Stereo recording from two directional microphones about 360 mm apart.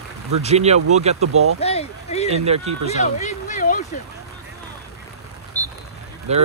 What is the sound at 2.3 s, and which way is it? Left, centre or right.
Speech, centre.